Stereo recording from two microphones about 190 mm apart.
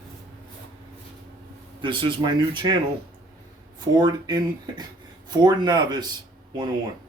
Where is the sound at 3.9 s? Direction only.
20° right (ahead or behind).